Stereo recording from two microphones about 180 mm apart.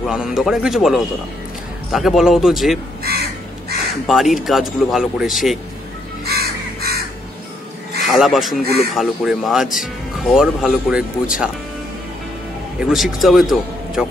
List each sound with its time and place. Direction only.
0.0 s speech: 5° right (ahead or behind)
4.1 s speech: centre (ahead or behind)
6.2 s crow: 60° right (ahead or behind)
8.0 s speech: centre (ahead or behind)
12.8 s speech: centre (ahead or behind)